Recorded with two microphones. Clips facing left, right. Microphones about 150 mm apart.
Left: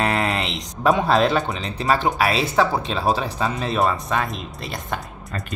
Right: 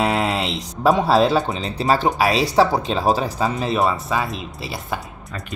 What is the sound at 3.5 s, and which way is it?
Speech, centre (ahead or behind).